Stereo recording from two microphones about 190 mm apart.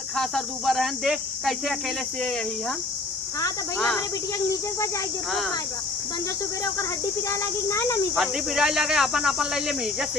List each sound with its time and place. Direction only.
0.2 s speech: centre (ahead or behind)
3.8 s speech: 10° left (ahead or behind)
7.3 s speech: 15° left (ahead or behind)
8.1 s speech: centre (ahead or behind)